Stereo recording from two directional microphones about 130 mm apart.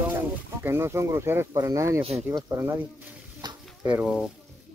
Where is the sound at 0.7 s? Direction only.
20° right (ahead or behind).